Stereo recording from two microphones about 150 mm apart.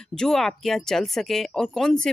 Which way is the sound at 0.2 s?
5° left (ahead or behind).